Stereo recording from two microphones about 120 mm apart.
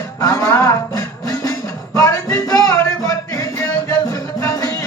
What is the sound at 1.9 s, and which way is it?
Music, 30° left (ahead or behind).